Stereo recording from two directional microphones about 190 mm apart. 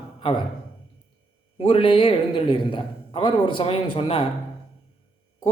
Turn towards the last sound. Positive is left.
turn(degrees=30)  # may be behind; listen again after turning